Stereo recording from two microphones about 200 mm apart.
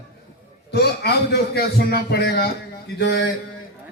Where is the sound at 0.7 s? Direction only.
50° left (ahead or behind).